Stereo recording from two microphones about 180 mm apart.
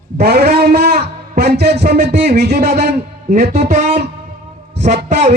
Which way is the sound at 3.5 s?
40° right (ahead or behind).